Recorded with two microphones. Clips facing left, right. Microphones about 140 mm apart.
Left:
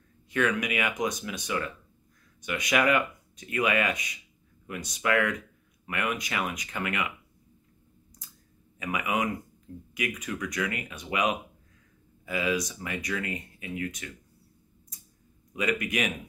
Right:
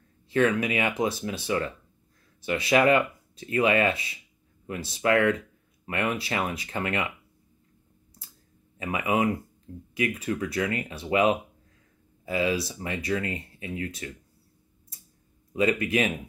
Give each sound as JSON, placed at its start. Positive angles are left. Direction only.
{"t": 0.3, "sound": "speech", "side_deg": -30}
{"t": 8.7, "sound": "speech", "side_deg": -30}
{"t": 15.5, "sound": "speech", "side_deg": -30}